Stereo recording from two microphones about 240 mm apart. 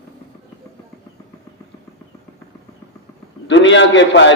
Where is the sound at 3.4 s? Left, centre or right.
Left.